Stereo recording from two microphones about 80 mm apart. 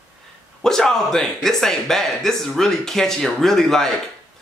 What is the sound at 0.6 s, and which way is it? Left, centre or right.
Speech, centre.